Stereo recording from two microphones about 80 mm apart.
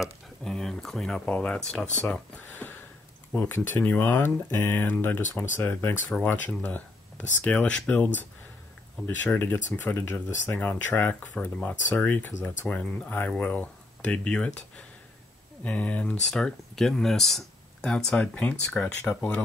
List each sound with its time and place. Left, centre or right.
0.4 s speech: centre
3.3 s speech: left; by 14.6 s centre
15.6 s speech: centre